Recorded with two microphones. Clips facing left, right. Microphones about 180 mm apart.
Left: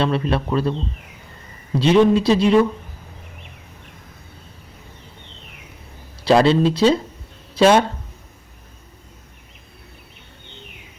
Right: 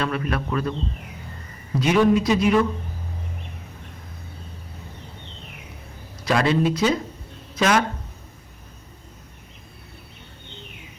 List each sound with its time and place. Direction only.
0.0 s speech: 30° left (ahead or behind)
1.8 s speech: 30° left (ahead or behind)
6.2 s speech: 30° left (ahead or behind)